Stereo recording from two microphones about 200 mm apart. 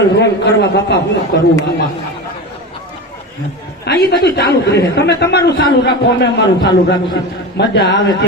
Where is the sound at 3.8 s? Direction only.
55° left (ahead or behind).